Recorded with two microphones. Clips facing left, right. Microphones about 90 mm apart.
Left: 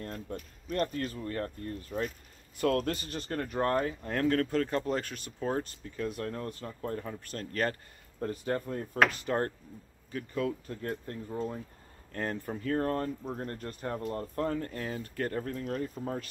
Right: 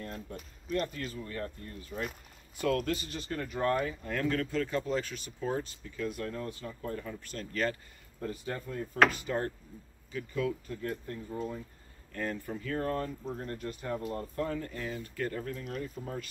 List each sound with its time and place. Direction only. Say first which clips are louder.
0.0 s speech: left 2 dB; 45° left (ahead or behind)
11.3 s speech: left 2 dB; 35° left (ahead or behind)
12.1 s speech: left 1 dB; 45° left (ahead or behind)